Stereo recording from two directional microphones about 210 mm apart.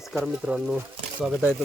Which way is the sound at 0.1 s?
5° right (ahead or behind).